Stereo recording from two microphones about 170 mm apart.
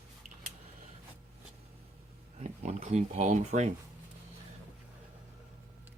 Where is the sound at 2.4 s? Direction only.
45° right (ahead or behind).